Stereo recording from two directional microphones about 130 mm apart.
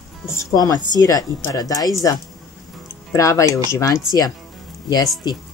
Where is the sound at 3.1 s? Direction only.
25° left (ahead or behind).